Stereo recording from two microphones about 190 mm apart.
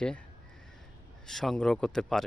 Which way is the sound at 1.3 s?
Centre (ahead or behind).